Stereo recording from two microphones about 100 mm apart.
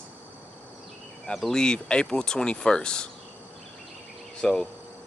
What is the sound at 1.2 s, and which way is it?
Speech, 5° left (ahead or behind).